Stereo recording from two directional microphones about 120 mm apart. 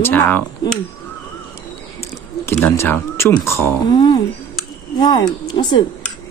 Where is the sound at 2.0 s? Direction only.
20° left (ahead or behind).